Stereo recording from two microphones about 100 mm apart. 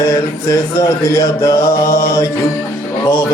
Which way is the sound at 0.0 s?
30° left (ahead or behind).